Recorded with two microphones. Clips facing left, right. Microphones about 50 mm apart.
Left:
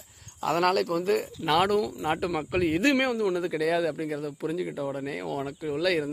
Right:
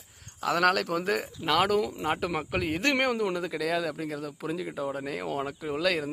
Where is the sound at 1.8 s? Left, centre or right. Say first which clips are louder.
Left 1 dB; centre.